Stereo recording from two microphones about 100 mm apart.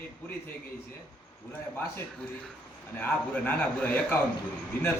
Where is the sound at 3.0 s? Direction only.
20° left (ahead or behind).